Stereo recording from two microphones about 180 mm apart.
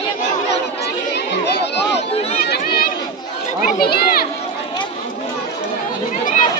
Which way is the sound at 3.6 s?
55° left (ahead or behind).